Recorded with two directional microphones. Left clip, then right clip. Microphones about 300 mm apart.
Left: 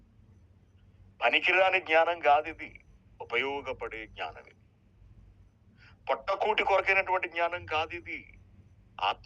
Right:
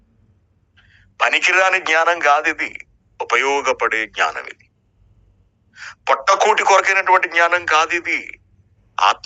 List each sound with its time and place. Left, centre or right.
1.1 s a man's voice: right
5.7 s a man's voice: right